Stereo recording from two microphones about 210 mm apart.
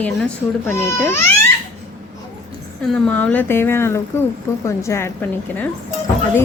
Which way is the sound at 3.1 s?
10° left (ahead or behind).